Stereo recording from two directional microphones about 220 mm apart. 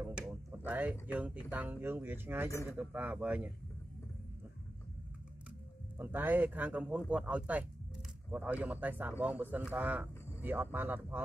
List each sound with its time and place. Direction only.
0.0 s a sound: 10° right (ahead or behind)
0.7 s speech: 5° right (ahead or behind)
5.9 s speech: 10° right (ahead or behind)